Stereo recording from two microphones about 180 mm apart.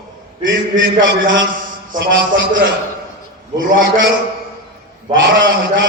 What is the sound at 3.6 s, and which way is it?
Speech, 90° right.